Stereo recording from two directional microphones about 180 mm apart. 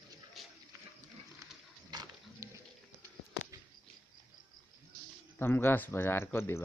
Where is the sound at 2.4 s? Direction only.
15° right (ahead or behind).